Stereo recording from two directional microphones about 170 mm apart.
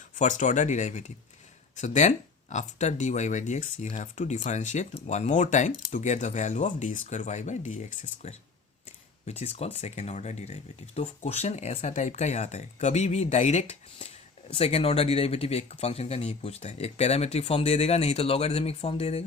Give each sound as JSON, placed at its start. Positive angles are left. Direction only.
{"t": 0.2, "sound": "speech", "side_deg": 45}